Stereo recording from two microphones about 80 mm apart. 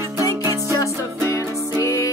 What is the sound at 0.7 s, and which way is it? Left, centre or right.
Music, left.